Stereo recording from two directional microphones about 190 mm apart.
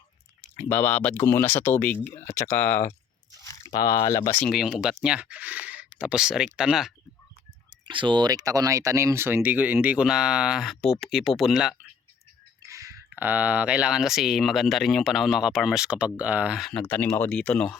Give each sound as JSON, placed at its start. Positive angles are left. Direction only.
{"t": 0.5, "sound": "speech", "side_deg": 10}
{"t": 4.5, "sound": "speech", "side_deg": 0}
{"t": 7.9, "sound": "speech", "side_deg": -25}
{"t": 12.6, "sound": "speech", "side_deg": -15}